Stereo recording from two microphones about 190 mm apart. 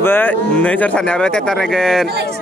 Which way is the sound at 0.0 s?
10° left (ahead or behind).